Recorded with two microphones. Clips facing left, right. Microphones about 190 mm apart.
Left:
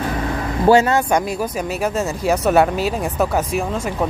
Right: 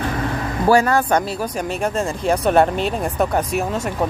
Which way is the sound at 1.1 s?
5° left (ahead or behind).